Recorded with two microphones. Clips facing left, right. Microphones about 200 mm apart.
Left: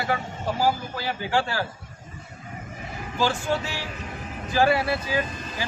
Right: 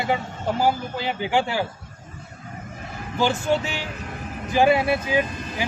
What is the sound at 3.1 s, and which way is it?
Speech, 20° right (ahead or behind).